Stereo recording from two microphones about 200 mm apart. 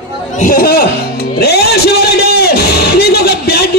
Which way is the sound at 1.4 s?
55° left (ahead or behind).